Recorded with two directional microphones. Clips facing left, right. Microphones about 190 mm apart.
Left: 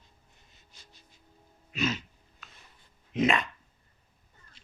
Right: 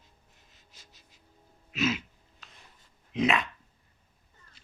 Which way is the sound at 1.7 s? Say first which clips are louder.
Right 2 dB; 5° right (ahead or behind).